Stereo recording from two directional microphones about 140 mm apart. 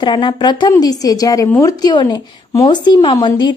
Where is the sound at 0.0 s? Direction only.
35° left (ahead or behind).